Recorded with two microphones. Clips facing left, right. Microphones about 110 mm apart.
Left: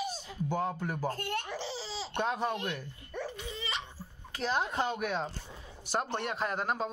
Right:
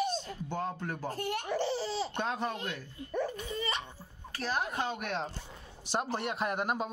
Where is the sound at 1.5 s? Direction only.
55° right (ahead or behind).